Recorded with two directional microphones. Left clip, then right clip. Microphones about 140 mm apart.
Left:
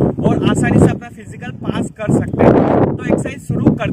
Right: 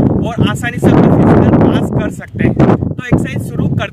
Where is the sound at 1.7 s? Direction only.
10° left (ahead or behind).